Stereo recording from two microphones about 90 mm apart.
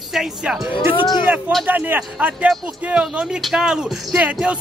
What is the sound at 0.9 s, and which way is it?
Speech, 55° left (ahead or behind).